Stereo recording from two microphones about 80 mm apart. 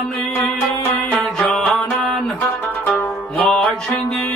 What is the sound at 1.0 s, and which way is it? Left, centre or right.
Music, centre.